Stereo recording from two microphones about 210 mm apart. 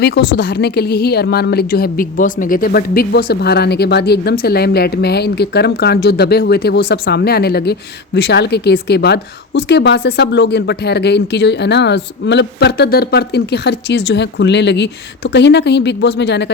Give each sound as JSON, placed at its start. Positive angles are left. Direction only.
{"t": 0.0, "sound": "a woman's voice", "side_deg": 55}